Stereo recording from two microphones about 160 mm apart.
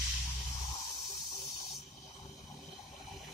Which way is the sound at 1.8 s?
Centre (ahead or behind).